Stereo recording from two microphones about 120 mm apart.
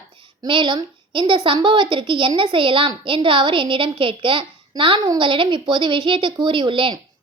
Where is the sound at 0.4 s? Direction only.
40° right (ahead or behind).